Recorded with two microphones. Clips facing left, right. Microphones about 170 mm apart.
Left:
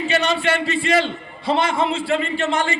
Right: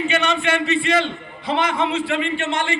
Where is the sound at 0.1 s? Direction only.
35° left (ahead or behind).